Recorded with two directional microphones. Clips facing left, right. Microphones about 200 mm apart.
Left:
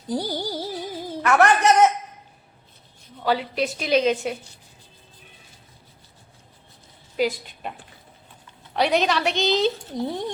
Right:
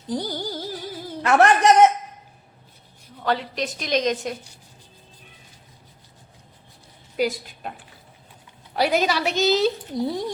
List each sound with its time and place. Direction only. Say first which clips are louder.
0.1 s music: left 1 dB; 10° left (ahead or behind)
1.2 s a man's voice: right 1 dB; 30° right (ahead or behind)
3.2 s a woman's voice: left 2 dB; 5° left (ahead or behind)
7.2 s a child's voice: even; centre (ahead or behind)
8.7 s a child's voice: even; 5° right (ahead or behind)